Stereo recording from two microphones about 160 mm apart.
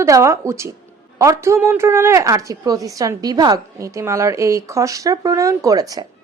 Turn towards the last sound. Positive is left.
turn(degrees=-20)  # may be behind; listen again after turning